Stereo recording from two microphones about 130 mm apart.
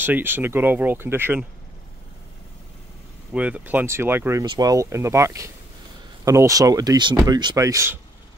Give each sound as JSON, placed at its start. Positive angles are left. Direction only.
{"t": 0.0, "sound": "speech", "side_deg": -15}
{"t": 3.3, "sound": "speech", "side_deg": -10}
{"t": 4.5, "sound": "speech", "side_deg": -30}